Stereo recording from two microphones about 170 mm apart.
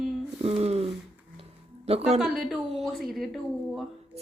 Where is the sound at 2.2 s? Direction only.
Centre (ahead or behind).